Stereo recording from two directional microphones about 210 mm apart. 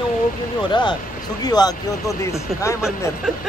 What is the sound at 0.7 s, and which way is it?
Speech, 20° left (ahead or behind).